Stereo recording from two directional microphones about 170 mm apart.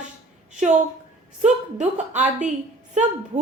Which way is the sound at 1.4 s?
45° right (ahead or behind).